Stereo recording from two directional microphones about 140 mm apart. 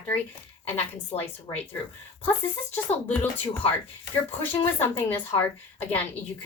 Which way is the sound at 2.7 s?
15° left (ahead or behind).